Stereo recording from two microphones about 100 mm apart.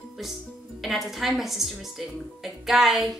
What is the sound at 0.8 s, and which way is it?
Speech, 5° right (ahead or behind).